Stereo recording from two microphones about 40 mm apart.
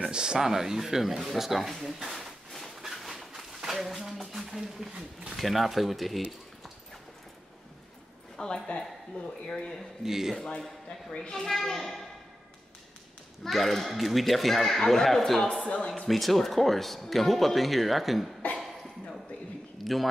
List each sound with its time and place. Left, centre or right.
0.0 s speech: centre
2.0 s a sound: centre
5.3 s speech: centre
8.6 s speech: left
10.0 s speech: centre
10.9 s a child's voice: centre
11.4 s a child's voice: centre
13.5 s speech: centre
15.6 s speech: left
16.1 s speech: centre
19.8 s speech: centre